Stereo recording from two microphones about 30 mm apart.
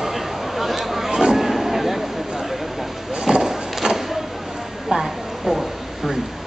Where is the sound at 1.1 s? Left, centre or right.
Centre.